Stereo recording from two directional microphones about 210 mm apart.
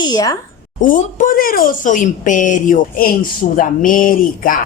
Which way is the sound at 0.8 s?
40° left (ahead or behind).